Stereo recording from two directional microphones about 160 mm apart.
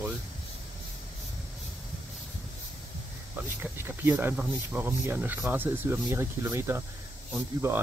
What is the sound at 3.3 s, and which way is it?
Speech, 15° right (ahead or behind).